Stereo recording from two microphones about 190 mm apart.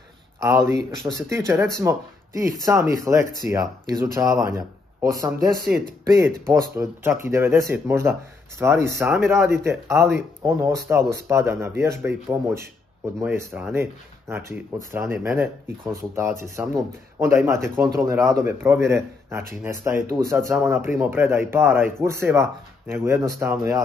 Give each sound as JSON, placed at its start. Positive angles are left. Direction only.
{"t": 0.4, "sound": "speech", "side_deg": -15}
{"t": 14.9, "sound": "speech", "side_deg": -10}